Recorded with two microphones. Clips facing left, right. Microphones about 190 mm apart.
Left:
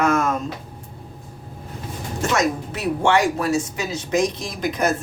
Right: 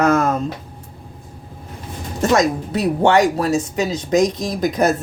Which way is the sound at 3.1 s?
40° right (ahead or behind).